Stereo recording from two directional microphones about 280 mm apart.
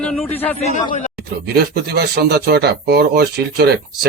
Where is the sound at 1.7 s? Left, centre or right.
Right.